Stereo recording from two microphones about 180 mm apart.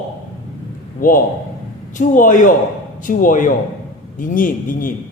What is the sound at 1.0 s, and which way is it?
A man's voice, 50° left (ahead or behind).